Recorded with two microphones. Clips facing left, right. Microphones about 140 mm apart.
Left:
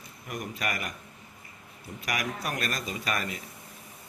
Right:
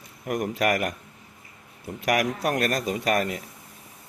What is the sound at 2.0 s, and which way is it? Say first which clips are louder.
A man's voice: right 9 dB; 65° right (ahead or behind).